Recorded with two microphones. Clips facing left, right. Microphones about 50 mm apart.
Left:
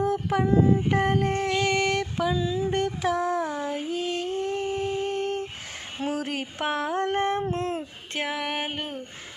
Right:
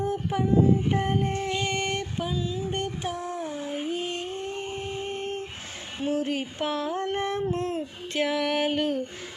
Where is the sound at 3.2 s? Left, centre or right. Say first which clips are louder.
Left 5 dB; left.